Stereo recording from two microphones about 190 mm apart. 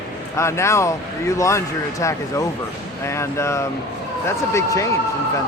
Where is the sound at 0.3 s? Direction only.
15° left (ahead or behind).